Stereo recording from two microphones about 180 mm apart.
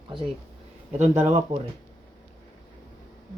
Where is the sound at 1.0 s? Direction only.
10° right (ahead or behind).